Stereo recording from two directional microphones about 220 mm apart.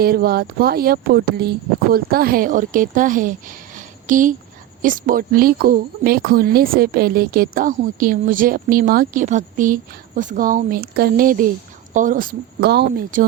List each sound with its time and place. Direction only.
0.0 s speech: 45° right (ahead or behind)